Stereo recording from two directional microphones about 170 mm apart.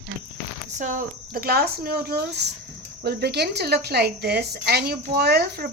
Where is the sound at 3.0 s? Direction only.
70° right (ahead or behind).